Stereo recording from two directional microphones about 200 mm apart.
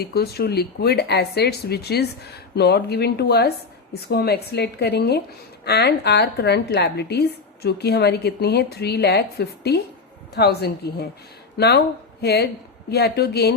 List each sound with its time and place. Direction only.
0.0 s a woman's voice: 50° left (ahead or behind)